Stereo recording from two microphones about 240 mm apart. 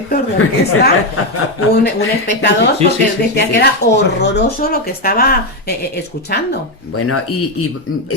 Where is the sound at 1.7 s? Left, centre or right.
Left.